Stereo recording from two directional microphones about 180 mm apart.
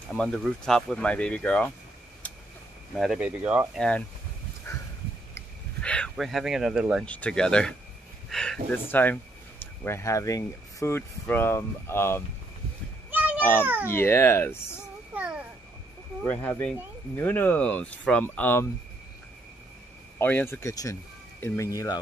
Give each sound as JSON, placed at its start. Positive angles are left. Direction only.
{"t": 0.1, "sound": "speech", "side_deg": 5}
{"t": 3.0, "sound": "speech", "side_deg": -5}
{"t": 4.7, "sound": "a sound", "side_deg": 15}
{"t": 7.1, "sound": "speech", "side_deg": 5}
{"t": 13.1, "sound": "meow", "side_deg": -10}
{"t": 13.4, "sound": "a child's voice", "side_deg": 10}
{"t": 15.1, "sound": "a sound", "side_deg": -5}
{"t": 16.3, "sound": "speech", "side_deg": 10}
{"t": 20.2, "sound": "speech", "side_deg": 10}